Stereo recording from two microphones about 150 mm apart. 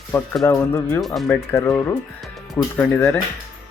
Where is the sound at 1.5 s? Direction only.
15° left (ahead or behind).